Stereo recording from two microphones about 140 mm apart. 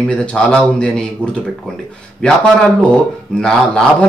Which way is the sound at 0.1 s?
5° left (ahead or behind).